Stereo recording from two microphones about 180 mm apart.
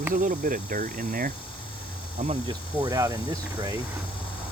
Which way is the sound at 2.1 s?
35° right (ahead or behind).